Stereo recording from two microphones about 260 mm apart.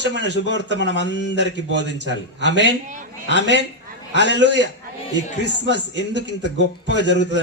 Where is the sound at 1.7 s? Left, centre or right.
Right.